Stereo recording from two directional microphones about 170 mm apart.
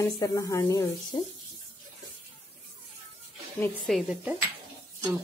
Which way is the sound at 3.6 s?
10° left (ahead or behind).